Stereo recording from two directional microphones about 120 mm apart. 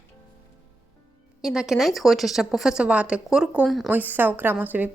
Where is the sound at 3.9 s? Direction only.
15° right (ahead or behind).